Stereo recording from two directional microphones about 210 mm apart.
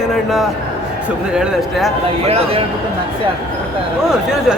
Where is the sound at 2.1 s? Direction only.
25° right (ahead or behind).